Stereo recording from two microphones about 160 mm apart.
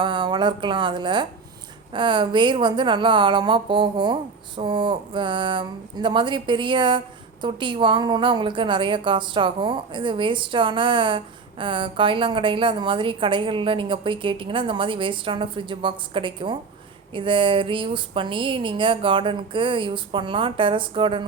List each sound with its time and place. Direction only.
0.0 s a woman's voice: 30° right (ahead or behind)